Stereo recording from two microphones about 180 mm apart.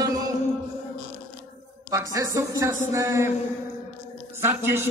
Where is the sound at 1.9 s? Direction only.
15° right (ahead or behind).